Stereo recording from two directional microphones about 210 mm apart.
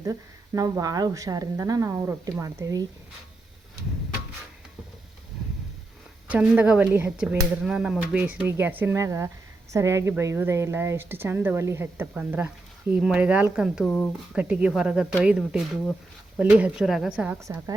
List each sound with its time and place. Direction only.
0.0 s speech: 15° right (ahead or behind)
6.2 s speech: 5° right (ahead or behind)